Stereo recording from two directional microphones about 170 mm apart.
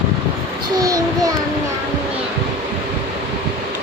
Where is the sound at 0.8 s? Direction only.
20° right (ahead or behind).